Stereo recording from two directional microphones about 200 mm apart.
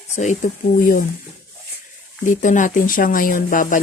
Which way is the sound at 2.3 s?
40° left (ahead or behind).